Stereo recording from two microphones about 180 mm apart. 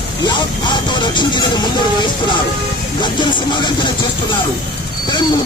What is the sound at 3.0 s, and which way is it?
Music, 25° left (ahead or behind).